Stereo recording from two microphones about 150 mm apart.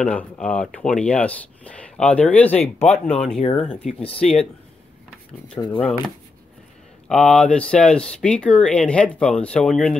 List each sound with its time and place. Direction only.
0.0 s speech: 5° left (ahead or behind)
5.6 s speech: 30° left (ahead or behind)
7.1 s speech: 5° left (ahead or behind)